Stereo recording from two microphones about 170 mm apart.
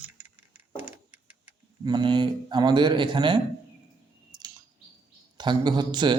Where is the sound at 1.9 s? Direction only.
25° right (ahead or behind).